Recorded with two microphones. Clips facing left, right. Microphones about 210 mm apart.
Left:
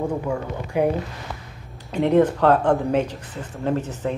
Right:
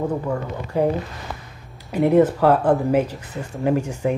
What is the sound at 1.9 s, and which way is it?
Speech, 10° right (ahead or behind).